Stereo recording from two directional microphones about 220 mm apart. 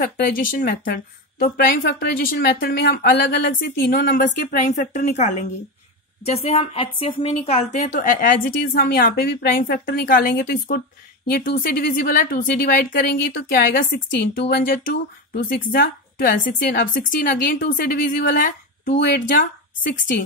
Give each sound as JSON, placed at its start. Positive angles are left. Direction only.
{"t": 0.0, "sound": "a woman's voice", "side_deg": 40}